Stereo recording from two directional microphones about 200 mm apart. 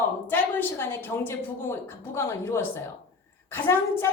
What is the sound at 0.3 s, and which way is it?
A woman's voice, 10° left (ahead or behind).